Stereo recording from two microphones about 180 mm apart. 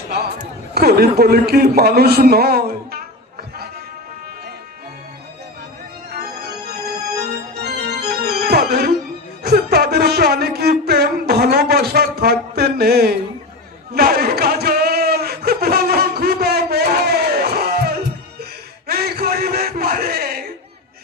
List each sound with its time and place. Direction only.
0.7 s a man's voice: 60° right (ahead or behind)
6.1 s organ: 60° right (ahead or behind)
7.3 s music: 65° right (ahead or behind)
9.4 s a sound: 60° right (ahead or behind)